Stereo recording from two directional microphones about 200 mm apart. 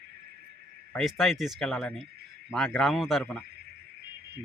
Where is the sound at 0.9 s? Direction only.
Centre (ahead or behind).